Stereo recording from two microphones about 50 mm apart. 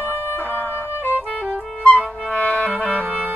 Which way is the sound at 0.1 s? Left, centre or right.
Left.